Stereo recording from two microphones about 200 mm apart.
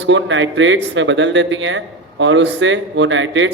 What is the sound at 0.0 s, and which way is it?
A man's voice, 65° right (ahead or behind).